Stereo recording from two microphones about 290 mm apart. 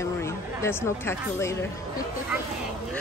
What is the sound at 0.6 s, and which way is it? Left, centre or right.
Speech, centre.